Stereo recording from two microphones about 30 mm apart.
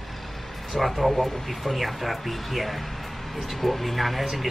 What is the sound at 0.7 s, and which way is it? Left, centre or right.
A woman's voice, centre.